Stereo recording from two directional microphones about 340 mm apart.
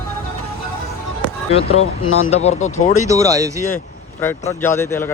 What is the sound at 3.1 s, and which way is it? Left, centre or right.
Speech, centre.